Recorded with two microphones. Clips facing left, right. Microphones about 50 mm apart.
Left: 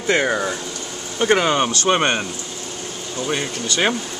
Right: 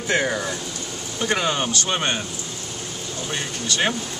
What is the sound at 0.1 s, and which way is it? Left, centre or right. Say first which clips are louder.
Speech: left 4 dB; left.